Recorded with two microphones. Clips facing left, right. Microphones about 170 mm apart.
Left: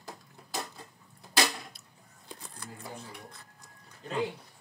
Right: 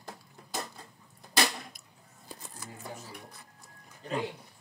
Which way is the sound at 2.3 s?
5° right (ahead or behind).